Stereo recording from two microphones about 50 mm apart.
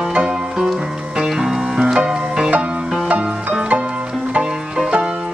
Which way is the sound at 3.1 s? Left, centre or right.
Right.